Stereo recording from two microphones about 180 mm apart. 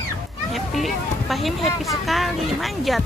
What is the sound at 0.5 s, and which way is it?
Speech, centre (ahead or behind).